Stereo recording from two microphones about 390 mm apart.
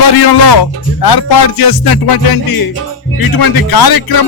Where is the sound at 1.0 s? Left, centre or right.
Left.